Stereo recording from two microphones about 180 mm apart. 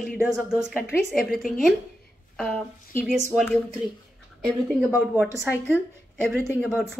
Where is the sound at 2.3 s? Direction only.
5° left (ahead or behind).